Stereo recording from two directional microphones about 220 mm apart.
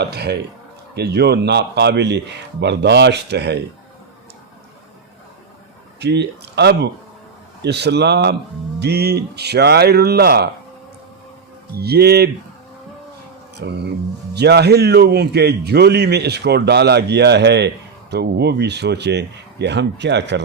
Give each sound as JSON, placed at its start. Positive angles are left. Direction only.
{"t": 0.0, "sound": "a man's voice", "side_deg": -50}
{"t": 6.0, "sound": "a man's voice", "side_deg": -50}
{"t": 11.8, "sound": "a man's voice", "side_deg": -45}
{"t": 13.6, "sound": "a man's voice", "side_deg": -50}